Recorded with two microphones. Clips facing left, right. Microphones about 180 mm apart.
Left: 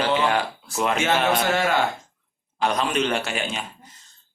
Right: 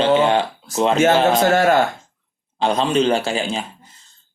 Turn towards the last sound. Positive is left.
turn(degrees=-30)  # may be behind; listen again after turning